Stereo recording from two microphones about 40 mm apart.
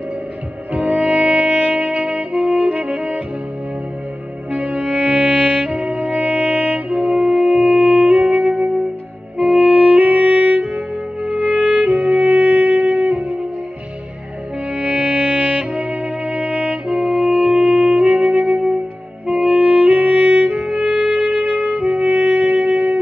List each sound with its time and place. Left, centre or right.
0.8 s saxophone: right
4.5 s music: right
6.9 s music: centre
7.7 s music: right
13.1 s music: right
14.7 s music: right
16.8 s music: centre
19.2 s saxophone: right
19.6 s music: right